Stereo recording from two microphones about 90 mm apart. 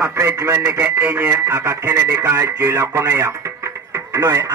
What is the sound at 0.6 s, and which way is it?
Speech, 15° right (ahead or behind).